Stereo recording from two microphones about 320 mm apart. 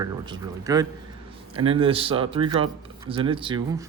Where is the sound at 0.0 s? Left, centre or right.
Centre.